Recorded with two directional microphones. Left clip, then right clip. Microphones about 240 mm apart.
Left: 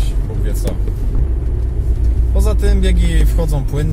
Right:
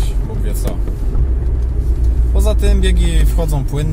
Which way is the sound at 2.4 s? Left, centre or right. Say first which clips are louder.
Right 2 dB; centre.